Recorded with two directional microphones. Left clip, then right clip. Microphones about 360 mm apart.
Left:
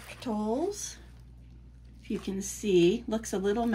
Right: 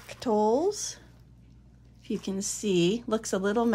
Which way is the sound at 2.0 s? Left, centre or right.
Centre.